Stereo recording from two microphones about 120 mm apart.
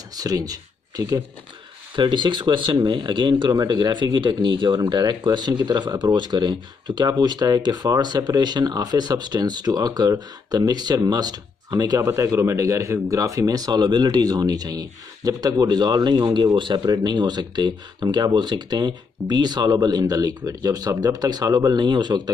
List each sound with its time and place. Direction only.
0.1 s speech: 30° right (ahead or behind)
2.0 s speech: 40° right (ahead or behind)